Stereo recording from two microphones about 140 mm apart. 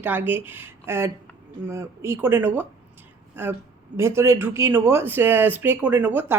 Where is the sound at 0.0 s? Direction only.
15° right (ahead or behind).